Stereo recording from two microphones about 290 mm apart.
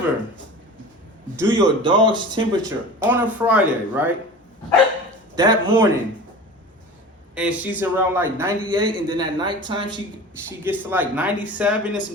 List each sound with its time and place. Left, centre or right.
1.4 s speech: centre
5.4 s speech: centre
7.3 s speech: centre